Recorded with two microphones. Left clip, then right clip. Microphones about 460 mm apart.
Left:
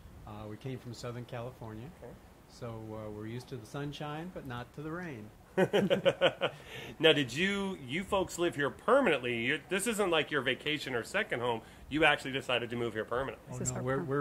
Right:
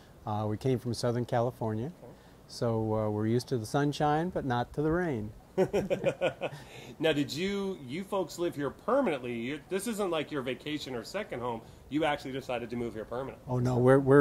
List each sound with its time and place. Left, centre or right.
0.3 s speech: right
5.6 s speech: left
13.7 s speech: right